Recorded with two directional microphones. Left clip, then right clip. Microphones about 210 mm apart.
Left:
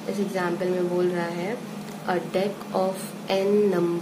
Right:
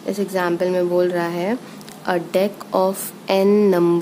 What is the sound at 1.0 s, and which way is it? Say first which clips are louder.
A woman's voice: right 6 dB; 50° right (ahead or behind).